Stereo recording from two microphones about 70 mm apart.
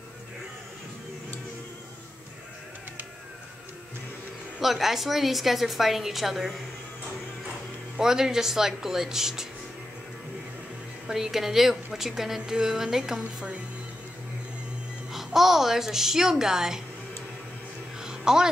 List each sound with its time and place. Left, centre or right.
4.6 s a woman's voice: centre
8.0 s a woman's voice: centre
11.1 s a woman's voice: centre
15.1 s a woman's voice: centre
18.0 s a sound: centre